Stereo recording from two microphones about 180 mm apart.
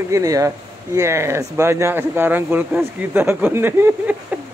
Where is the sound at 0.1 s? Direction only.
20° right (ahead or behind).